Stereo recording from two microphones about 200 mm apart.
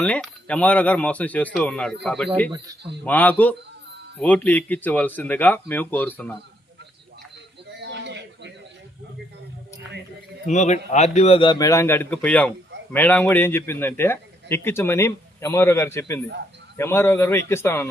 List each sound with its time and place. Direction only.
0.0 s speech: 5° left (ahead or behind)
7.8 s a sound: 60° right (ahead or behind)
10.4 s a man's voice: 35° left (ahead or behind); by 17.8 s 10° left (ahead or behind)